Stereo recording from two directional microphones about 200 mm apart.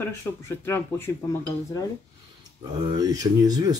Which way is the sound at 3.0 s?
20° right (ahead or behind).